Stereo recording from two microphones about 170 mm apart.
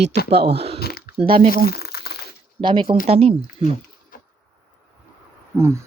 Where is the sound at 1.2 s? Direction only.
35° right (ahead or behind).